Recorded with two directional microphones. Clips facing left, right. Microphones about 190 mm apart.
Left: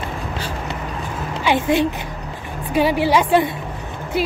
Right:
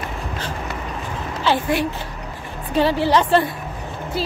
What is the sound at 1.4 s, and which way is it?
A woman's voice, 20° left (ahead or behind).